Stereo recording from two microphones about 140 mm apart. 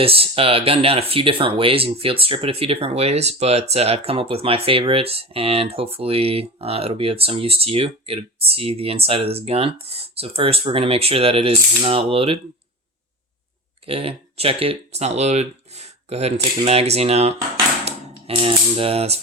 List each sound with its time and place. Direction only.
0.0 s speech: 40° right (ahead or behind)
13.8 s speech: 40° right (ahead or behind)